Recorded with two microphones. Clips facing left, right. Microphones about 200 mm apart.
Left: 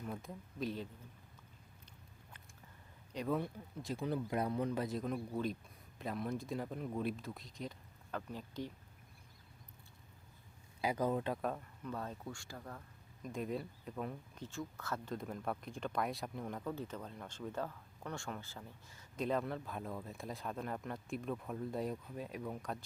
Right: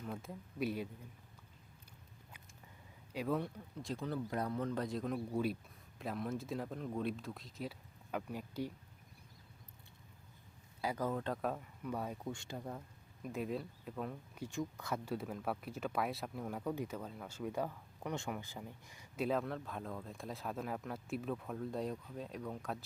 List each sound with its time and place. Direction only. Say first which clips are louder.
0.0 s speech: even; 5° right (ahead or behind)
2.3 s a sound: even; 10° right (ahead or behind)
3.1 s speech: even; 5° right (ahead or behind)
4.0 s speech: left 3 dB; 15° left (ahead or behind); by 8.7 s 10° right (ahead or behind)
10.8 s speech: left 3 dB; 15° left (ahead or behind)
11.4 s speech: right 1 dB; 5° right (ahead or behind)
13.2 s speech: even; 5° right (ahead or behind)
14.3 s speech: right 4 dB; 15° right (ahead or behind); by 22.8 s centre (ahead or behind)